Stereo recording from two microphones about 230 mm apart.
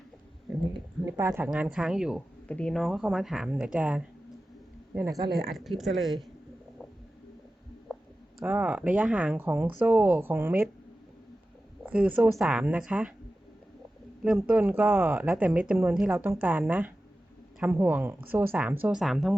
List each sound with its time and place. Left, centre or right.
0.7 s speech: centre
5.5 s speech: centre
8.4 s speech: centre
11.9 s speech: centre
14.3 s speech: centre